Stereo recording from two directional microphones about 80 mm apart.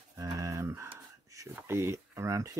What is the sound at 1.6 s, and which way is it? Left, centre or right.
Speech, right.